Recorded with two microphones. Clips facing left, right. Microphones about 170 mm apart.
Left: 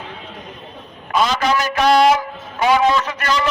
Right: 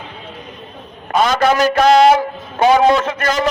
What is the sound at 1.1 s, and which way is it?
A man's voice, 50° right (ahead or behind).